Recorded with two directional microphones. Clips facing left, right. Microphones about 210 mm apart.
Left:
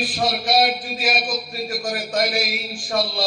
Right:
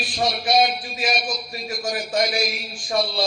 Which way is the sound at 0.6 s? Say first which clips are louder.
Right 1 dB; 5° left (ahead or behind).